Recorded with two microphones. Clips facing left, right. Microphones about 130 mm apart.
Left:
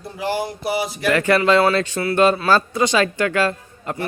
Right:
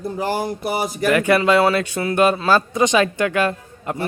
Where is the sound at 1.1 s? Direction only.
15° right (ahead or behind).